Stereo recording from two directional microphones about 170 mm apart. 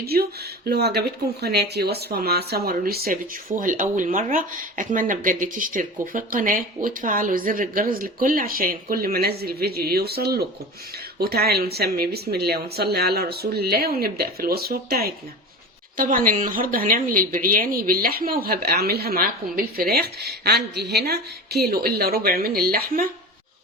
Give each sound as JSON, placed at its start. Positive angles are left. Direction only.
{"t": 0.0, "sound": "speech", "side_deg": -65}
{"t": 16.0, "sound": "speech", "side_deg": -55}